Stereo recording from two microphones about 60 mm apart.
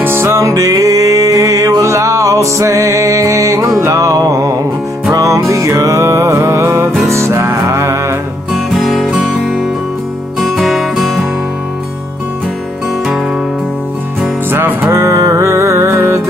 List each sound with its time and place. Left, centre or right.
0.0 s music: right
0.4 s music: right
8.5 s music: centre
10.4 s music: centre
14.5 s music: right